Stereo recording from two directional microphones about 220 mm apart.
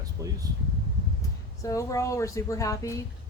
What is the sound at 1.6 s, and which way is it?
Speech, 15° left (ahead or behind).